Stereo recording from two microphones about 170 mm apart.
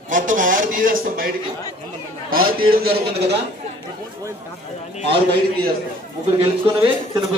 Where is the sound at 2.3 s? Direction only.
60° right (ahead or behind).